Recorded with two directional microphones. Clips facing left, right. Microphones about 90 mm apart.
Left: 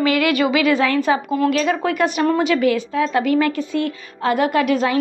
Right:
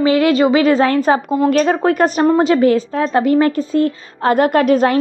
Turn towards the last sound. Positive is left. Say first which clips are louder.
# right 5 dB
turn(degrees=-45)  # may be behind; listen again after turning